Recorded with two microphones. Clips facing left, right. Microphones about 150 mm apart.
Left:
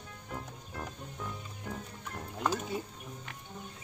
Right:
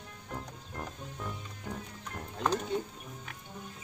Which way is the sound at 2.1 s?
5° left (ahead or behind).